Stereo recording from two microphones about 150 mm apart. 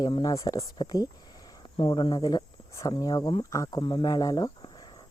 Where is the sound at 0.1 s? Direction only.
25° left (ahead or behind).